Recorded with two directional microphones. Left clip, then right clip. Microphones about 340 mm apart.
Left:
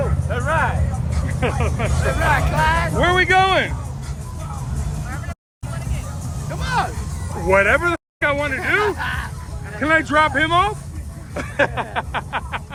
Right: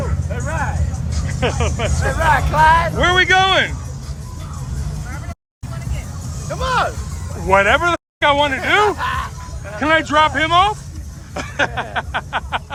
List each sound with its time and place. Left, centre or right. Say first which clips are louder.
0.3 s music: left 5 dB; centre
1.4 s speech: right 3 dB; centre
3.0 s speech: right 2 dB; centre
6.5 s music: right 4 dB; centre
7.4 s speech: right 2 dB; centre